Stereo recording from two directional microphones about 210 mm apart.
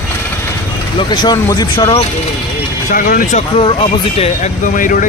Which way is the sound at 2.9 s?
40° left (ahead or behind).